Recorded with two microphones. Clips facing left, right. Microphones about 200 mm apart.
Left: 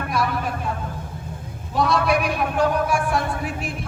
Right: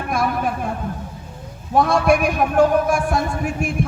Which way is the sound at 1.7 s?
50° right (ahead or behind).